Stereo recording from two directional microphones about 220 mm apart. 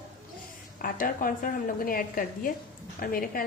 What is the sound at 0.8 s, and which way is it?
A woman's voice, 40° left (ahead or behind).